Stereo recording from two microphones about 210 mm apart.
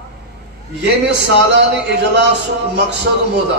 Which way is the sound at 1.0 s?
55° right (ahead or behind).